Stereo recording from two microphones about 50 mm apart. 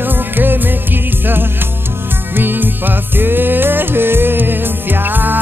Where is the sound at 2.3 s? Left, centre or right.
Right.